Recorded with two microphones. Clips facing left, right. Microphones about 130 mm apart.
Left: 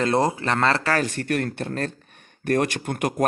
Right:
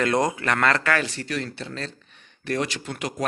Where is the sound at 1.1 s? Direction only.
55° left (ahead or behind).